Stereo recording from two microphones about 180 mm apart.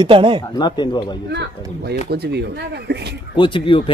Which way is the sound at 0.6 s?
25° left (ahead or behind).